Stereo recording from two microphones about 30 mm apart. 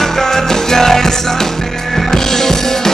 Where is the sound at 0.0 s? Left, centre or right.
Centre.